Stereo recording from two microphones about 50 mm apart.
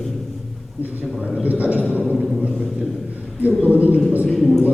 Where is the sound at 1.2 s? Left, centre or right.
Right.